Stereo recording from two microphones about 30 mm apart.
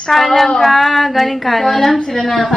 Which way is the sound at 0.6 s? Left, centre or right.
Centre.